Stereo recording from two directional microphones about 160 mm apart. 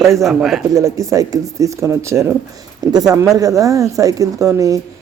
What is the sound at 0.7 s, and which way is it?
Speech, 20° right (ahead or behind).